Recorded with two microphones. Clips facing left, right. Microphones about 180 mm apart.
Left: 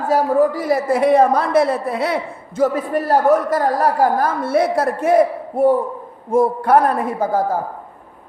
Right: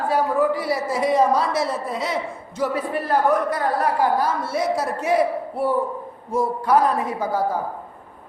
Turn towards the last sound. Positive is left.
turn(degrees=50)  # may be behind; listen again after turning